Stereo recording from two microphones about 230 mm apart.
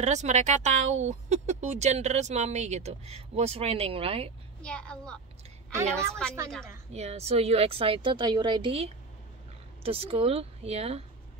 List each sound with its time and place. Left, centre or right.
0.0 s speech: right
4.6 s a woman's voice: centre
6.9 s speech: right